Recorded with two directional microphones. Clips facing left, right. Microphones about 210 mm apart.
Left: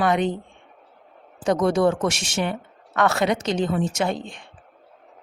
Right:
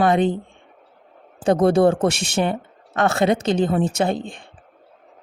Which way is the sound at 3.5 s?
55° right (ahead or behind).